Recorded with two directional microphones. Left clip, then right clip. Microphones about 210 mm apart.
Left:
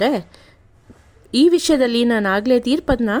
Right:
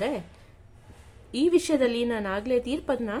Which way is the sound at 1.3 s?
40° left (ahead or behind).